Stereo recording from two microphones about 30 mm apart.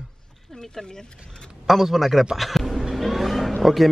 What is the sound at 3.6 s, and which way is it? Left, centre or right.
Speech, centre.